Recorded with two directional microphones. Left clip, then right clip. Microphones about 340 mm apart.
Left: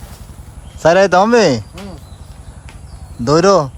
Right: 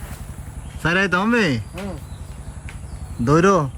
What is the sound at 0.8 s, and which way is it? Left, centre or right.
Speech, centre.